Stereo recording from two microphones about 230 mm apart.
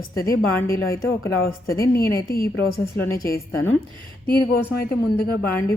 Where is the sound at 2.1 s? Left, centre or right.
Left.